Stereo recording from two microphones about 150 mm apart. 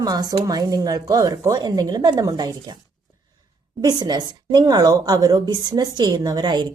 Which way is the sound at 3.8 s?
25° right (ahead or behind).